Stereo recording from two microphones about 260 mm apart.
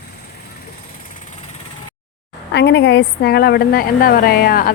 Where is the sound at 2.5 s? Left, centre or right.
Left.